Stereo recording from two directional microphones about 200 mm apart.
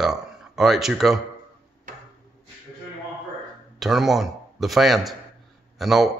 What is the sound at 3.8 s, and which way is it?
A man's voice, centre (ahead or behind).